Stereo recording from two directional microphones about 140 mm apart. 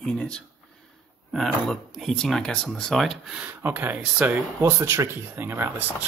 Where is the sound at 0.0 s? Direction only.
5° left (ahead or behind).